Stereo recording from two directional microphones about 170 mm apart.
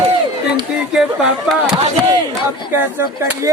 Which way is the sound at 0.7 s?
5° right (ahead or behind).